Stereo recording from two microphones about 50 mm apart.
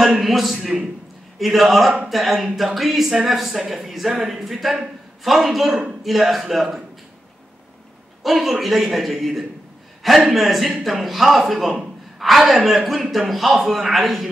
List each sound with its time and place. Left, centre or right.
0.0 s speech: centre
8.2 s speech: centre